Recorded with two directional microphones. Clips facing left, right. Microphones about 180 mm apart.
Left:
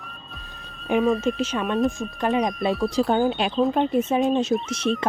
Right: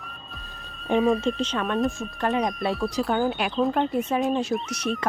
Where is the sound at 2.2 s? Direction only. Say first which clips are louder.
Left 2 dB; 20° left (ahead or behind).